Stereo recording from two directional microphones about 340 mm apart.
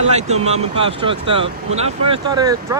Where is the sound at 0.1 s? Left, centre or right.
Centre.